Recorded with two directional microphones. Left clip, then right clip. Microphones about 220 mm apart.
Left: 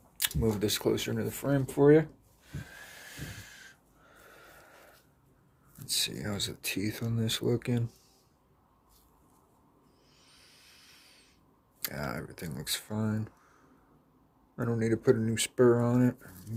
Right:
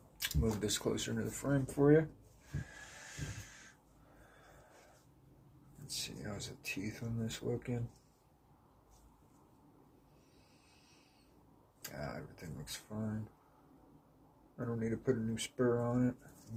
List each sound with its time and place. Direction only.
0.2 s speech: 40° left (ahead or behind)
5.9 s speech: 50° left (ahead or behind)
11.8 s a sound: 45° left (ahead or behind)
14.5 s speech: 50° left (ahead or behind)